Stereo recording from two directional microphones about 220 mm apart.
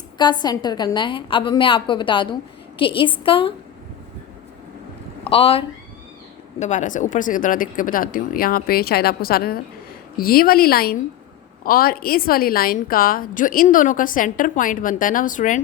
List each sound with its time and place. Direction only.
0.2 s a woman's voice: 20° left (ahead or behind)
5.2 s a woman's voice: 25° left (ahead or behind)